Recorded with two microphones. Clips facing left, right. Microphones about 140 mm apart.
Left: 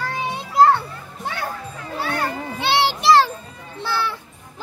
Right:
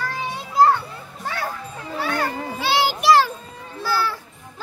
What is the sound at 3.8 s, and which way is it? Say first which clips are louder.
Children playing: right 1 dB; 25° left (ahead or behind).